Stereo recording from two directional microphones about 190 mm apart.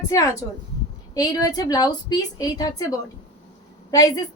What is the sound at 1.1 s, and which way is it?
A woman's voice, 20° left (ahead or behind).